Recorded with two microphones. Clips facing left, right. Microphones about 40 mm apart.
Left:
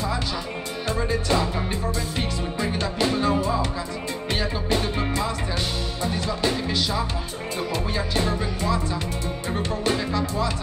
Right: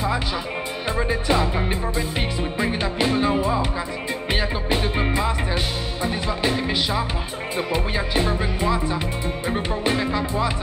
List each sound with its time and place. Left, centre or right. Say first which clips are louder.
0.8 s music: right 2 dB; centre